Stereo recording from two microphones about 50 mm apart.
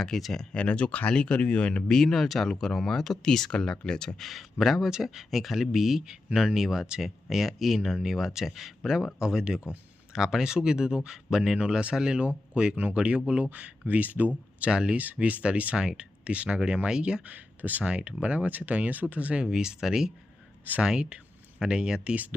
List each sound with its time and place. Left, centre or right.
0.0 s speech: centre
0.5 s speech: left
1.9 s speech: centre
4.3 s speech: centre; by 14.3 s right
14.6 s speech: centre
14.9 s speech: right
17.2 s speech: right
17.8 s speech: right
19.5 s speech: centre
22.1 s speech: right